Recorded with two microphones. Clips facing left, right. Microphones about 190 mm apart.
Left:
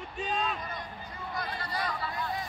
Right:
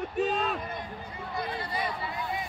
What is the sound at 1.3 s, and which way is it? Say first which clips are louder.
Speech: right 3 dB; 25° right (ahead or behind).